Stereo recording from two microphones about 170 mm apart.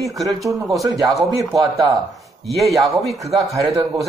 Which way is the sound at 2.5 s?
Centre (ahead or behind).